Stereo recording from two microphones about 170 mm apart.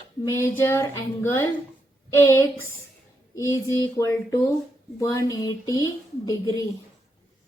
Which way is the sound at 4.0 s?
15° left (ahead or behind).